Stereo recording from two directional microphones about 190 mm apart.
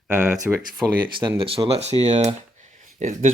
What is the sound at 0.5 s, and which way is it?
Speech, 10° right (ahead or behind).